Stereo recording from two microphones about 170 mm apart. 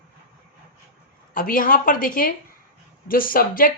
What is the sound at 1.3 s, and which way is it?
A woman's voice, 55° left (ahead or behind).